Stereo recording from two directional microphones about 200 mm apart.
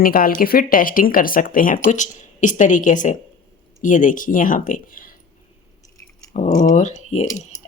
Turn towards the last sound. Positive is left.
turn(degrees=35)  # may be behind; listen again after turning